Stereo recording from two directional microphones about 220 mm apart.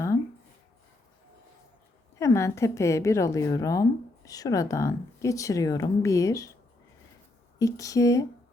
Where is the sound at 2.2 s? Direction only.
15° left (ahead or behind).